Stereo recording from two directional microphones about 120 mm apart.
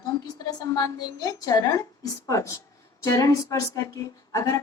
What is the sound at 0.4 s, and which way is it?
A woman's voice, 30° left (ahead or behind).